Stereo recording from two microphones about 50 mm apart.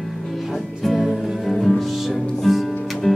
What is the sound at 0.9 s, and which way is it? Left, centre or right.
Music, centre.